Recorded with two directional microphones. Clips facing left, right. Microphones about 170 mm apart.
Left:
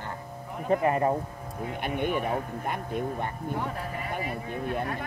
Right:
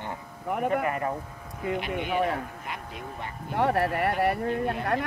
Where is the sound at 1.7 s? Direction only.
50° left (ahead or behind).